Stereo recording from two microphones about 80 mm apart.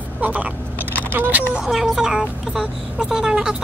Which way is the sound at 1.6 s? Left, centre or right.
Centre.